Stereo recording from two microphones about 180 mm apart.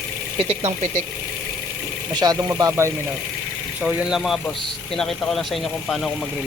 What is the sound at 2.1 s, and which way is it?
Speech, 20° right (ahead or behind).